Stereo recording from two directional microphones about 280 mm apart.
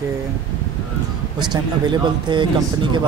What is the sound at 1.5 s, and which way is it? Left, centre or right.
Speech, centre.